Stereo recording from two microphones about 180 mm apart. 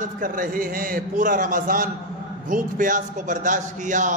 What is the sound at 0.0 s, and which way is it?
A man's voice, 50° right (ahead or behind).